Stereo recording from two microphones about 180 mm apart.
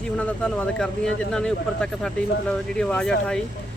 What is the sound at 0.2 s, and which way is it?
Speech, 5° left (ahead or behind).